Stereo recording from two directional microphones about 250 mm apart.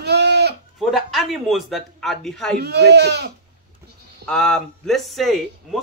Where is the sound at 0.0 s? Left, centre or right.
Right.